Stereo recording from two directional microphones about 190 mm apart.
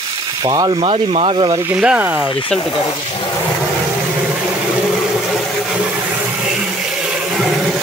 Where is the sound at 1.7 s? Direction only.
5° right (ahead or behind).